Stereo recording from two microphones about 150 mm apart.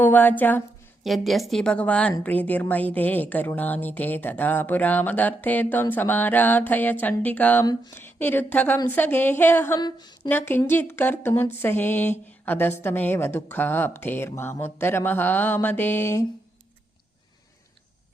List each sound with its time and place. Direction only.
0.0 s a woman's voice: 10° left (ahead or behind)
1.0 s a woman's voice: centre (ahead or behind)
7.6 s speech: 25° left (ahead or behind)
9.8 s a woman's voice: 30° left (ahead or behind)
10.2 s speech: 15° left (ahead or behind)